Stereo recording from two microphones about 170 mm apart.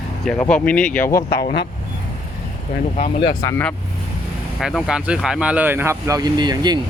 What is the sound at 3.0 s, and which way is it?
Speech, 30° left (ahead or behind).